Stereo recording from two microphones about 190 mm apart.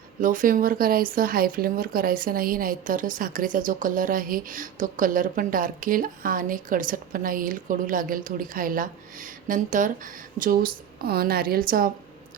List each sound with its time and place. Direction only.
0.2 s speech: 45° right (ahead or behind)